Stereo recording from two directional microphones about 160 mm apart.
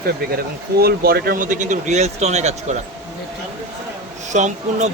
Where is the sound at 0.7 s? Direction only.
75° right (ahead or behind); by 2.8 s 45° right (ahead or behind).